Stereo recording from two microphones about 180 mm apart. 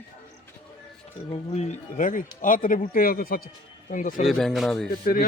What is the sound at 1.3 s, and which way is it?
Speech, 35° left (ahead or behind).